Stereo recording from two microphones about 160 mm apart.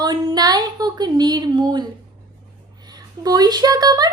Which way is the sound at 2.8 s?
25° right (ahead or behind).